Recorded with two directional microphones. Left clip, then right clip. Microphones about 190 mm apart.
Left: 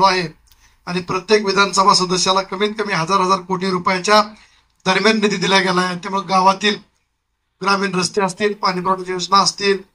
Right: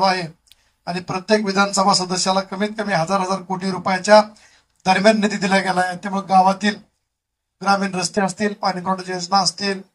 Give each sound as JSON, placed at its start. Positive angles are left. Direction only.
{"t": 0.0, "sound": "speech", "side_deg": -60}
{"t": 4.8, "sound": "speech", "side_deg": -65}